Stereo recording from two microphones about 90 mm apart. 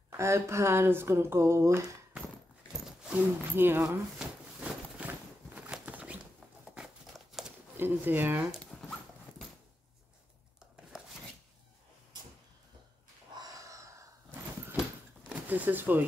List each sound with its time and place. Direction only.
0.2 s speech: 30° right (ahead or behind)
3.0 s speech: 15° right (ahead or behind)
3.5 s speech: 25° right (ahead or behind)
4.2 s a sound: 15° right (ahead or behind)
7.7 s speech: 25° right (ahead or behind)
9.3 s a sound: 15° left (ahead or behind)
13.3 s wheeze: 40° right (ahead or behind)
15.2 s speech: 20° right (ahead or behind)